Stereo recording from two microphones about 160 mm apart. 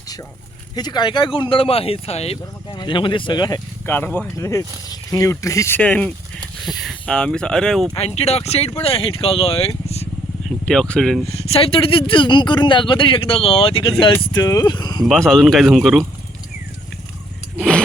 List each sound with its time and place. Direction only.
0.8 s speech: 25° left (ahead or behind)
3.8 s speech: 10° left (ahead or behind)
7.9 s speech: 40° left (ahead or behind)
10.7 s speech: 5° left (ahead or behind)
11.3 s speech: 40° left (ahead or behind)
15.0 s speech: centre (ahead or behind)
17.6 s a sound: 5° left (ahead or behind)